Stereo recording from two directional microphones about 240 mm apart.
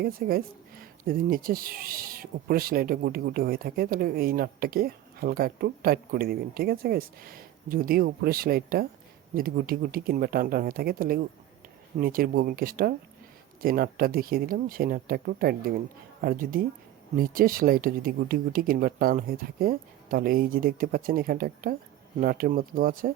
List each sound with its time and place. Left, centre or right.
0.0 s speech: right